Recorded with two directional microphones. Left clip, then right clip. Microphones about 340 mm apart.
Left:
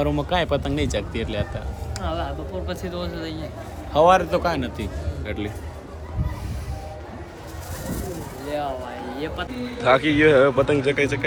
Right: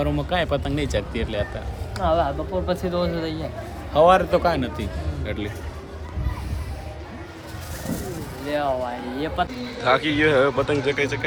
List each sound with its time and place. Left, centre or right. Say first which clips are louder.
0.0 s speech: left 1 dB; centre
2.0 s speech: right 8 dB; centre
3.9 s speech: right 1 dB; centre
8.4 s speech: right 3 dB; right
9.1 s speech: right 5 dB; centre